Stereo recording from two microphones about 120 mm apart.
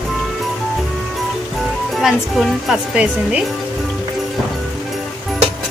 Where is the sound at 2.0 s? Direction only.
5° right (ahead or behind).